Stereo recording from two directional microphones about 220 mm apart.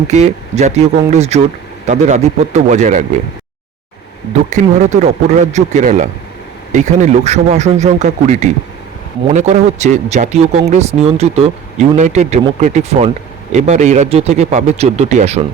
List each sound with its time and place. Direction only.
0.1 s speech: 30° right (ahead or behind)
4.4 s speech: 35° right (ahead or behind)